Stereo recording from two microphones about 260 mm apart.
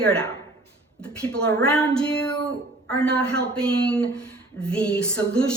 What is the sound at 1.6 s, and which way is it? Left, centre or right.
A woman's voice, centre.